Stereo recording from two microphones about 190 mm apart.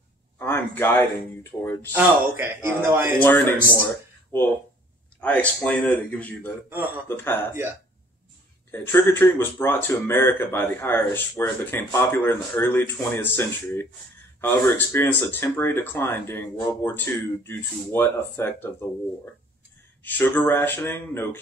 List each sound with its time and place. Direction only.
0.4 s speech: 10° left (ahead or behind)
1.9 s a man's voice: 10° right (ahead or behind)
3.2 s speech: 10° left (ahead or behind)
5.2 s speech: 5° left (ahead or behind)
8.7 s speech: 10° left (ahead or behind)
20.0 s speech: 10° left (ahead or behind)